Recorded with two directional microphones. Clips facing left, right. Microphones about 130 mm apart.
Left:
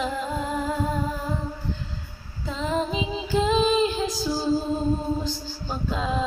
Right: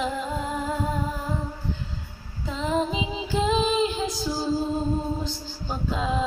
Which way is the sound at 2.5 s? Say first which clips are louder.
Right 1 dB; 15° right (ahead or behind).